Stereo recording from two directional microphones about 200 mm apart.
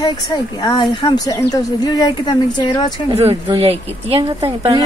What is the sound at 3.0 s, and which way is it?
Speech, 30° right (ahead or behind).